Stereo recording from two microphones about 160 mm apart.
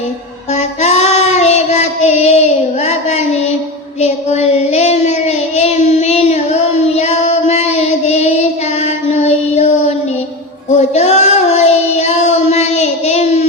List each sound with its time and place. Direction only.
0.5 s child singing: 45° left (ahead or behind)
10.8 s child singing: 45° left (ahead or behind)